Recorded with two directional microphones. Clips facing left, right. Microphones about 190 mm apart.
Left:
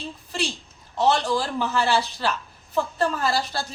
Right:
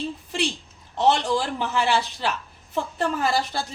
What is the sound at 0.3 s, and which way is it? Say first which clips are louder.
A woman's voice: left 2 dB; 20° right (ahead or behind).